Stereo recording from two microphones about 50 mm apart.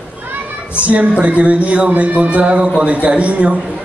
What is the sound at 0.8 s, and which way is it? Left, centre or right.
A man's voice, right.